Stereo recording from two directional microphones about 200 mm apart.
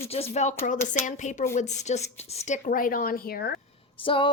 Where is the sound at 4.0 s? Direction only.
25° left (ahead or behind).